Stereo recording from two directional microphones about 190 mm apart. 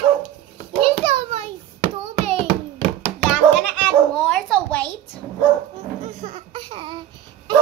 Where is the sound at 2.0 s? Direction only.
30° right (ahead or behind).